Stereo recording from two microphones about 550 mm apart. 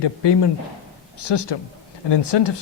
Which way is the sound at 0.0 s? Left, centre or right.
Left.